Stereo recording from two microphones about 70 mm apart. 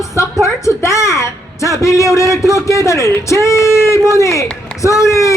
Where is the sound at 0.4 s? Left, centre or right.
Left.